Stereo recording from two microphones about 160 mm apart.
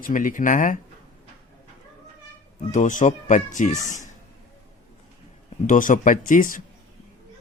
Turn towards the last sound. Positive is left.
turn(degrees=55)  # may be behind; listen again after turning